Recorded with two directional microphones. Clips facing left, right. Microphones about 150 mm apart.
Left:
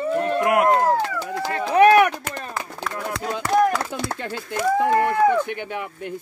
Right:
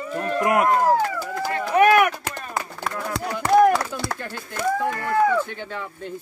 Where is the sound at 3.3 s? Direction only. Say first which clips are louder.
Right 3 dB; 25° left (ahead or behind).